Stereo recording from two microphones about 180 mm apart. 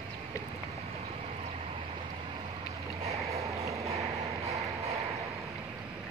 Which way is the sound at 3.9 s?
15° right (ahead or behind).